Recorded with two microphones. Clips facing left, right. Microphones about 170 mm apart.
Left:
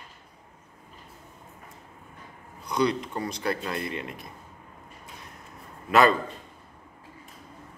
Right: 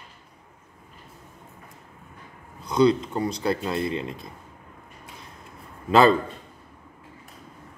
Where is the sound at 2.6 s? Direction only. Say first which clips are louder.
Right 6 dB; 30° right (ahead or behind).